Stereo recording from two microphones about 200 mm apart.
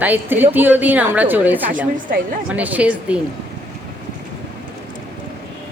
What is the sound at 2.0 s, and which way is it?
Speech, 45° right (ahead or behind).